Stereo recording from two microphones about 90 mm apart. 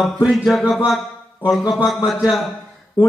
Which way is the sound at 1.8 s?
Centre (ahead or behind).